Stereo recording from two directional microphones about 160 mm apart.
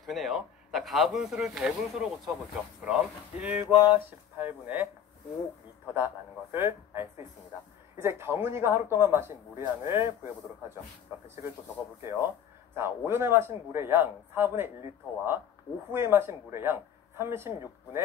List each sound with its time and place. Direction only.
0.0 s a man's voice: centre (ahead or behind)
3.6 s a sound: 25° left (ahead or behind)
4.4 s a man's voice: 10° right (ahead or behind)
5.9 s a man's voice: 15° right (ahead or behind)
12.0 s a man's voice: 15° right (ahead or behind)